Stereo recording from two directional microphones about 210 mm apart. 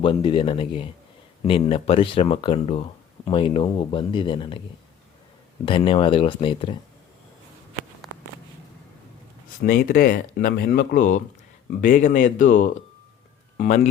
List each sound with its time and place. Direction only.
0.0 s speech: 25° left (ahead or behind)
5.6 s speech: 25° left (ahead or behind)
8.0 s a sound: centre (ahead or behind)
9.6 s speech: 40° left (ahead or behind)